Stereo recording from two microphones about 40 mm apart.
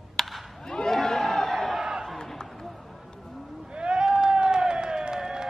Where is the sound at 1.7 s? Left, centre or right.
Centre.